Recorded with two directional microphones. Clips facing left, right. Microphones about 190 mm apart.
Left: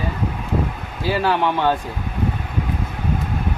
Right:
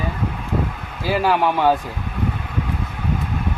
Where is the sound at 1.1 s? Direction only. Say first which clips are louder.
Right 2 dB; 10° right (ahead or behind).